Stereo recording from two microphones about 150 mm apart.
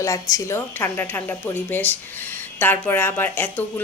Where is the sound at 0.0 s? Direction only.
20° left (ahead or behind).